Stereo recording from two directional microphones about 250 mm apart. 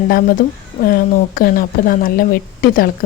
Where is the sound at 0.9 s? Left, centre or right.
Left.